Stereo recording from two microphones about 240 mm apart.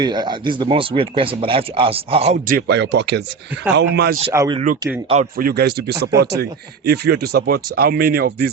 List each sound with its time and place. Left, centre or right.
0.0 s speech: centre; by 4.2 s right
4.3 s speech: centre
5.0 s speech: right